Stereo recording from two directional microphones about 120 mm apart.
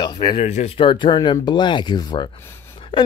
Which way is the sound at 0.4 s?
70° left (ahead or behind).